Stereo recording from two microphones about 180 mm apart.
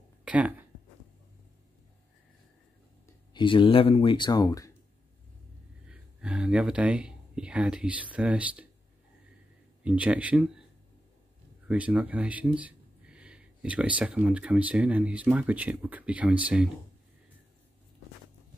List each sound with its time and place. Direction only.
0.2 s a sound: 5° right (ahead or behind)
3.3 s speech: 25° left (ahead or behind)
5.9 s speech: 5° right (ahead or behind)
9.8 s speech: 10° right (ahead or behind)
11.6 s speech: 10° right (ahead or behind)